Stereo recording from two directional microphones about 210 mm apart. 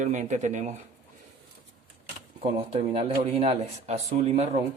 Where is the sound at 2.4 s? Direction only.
25° right (ahead or behind).